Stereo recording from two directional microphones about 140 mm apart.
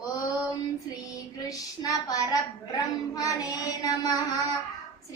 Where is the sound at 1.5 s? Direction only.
25° left (ahead or behind).